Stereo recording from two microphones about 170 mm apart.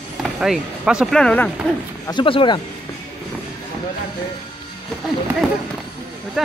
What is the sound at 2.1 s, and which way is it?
Speech, 30° left (ahead or behind).